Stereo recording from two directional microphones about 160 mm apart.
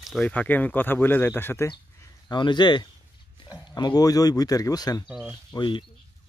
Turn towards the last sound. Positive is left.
turn(degrees=30)  # may be behind; listen again after turning